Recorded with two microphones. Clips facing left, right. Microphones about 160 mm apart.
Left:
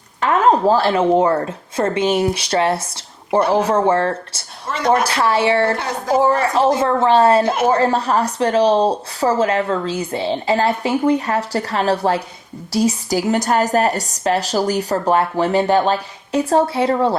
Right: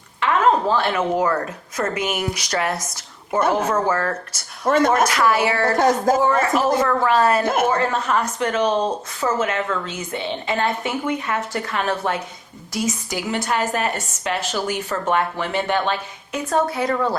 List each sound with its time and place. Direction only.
0.2 s speech: 40° left (ahead or behind)
4.6 s speech: 50° right (ahead or behind)
5.0 s speech: 30° left (ahead or behind)
5.7 s speech: 45° right (ahead or behind)
6.2 s speech: 30° left (ahead or behind)
7.4 s speech: 50° right (ahead or behind)
7.7 s a woman's voice: 35° left (ahead or behind)